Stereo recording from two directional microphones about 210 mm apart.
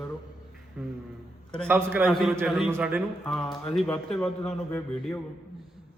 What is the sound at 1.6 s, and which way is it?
A man's voice, 10° right (ahead or behind).